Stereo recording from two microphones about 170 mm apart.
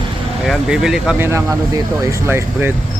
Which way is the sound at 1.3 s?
15° right (ahead or behind).